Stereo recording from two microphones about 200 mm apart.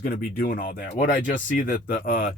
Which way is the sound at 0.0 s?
45° left (ahead or behind).